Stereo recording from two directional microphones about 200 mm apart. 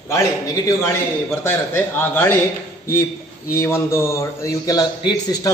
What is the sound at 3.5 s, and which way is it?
A man's voice, 15° left (ahead or behind).